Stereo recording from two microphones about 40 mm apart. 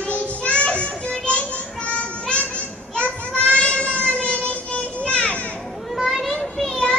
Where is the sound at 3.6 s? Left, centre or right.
Left.